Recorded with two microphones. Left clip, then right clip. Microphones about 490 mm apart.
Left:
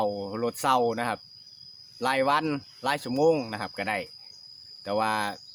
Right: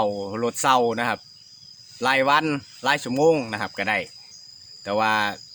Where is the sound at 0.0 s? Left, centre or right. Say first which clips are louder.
Right 4 dB; left.